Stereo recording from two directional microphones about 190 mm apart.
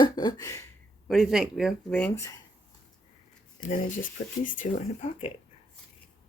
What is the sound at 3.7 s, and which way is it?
Speech, 45° left (ahead or behind).